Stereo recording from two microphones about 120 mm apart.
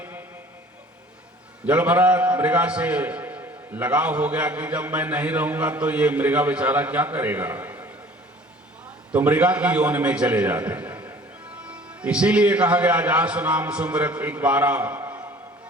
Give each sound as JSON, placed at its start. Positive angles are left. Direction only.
{"t": 0.0, "sound": "a sound", "side_deg": -15}
{"t": 1.6, "sound": "a man's voice", "side_deg": -15}
{"t": 9.1, "sound": "a man's voice", "side_deg": -10}